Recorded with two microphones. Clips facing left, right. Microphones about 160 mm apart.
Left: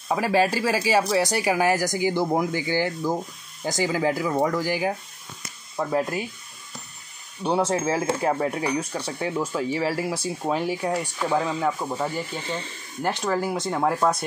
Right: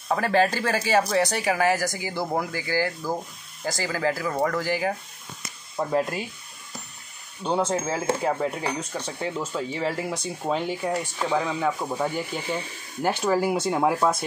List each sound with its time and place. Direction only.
0.1 s speech: 10° left (ahead or behind)
5.9 s speech: centre (ahead or behind)
7.4 s speech: 10° left (ahead or behind)
11.9 s speech: 10° right (ahead or behind)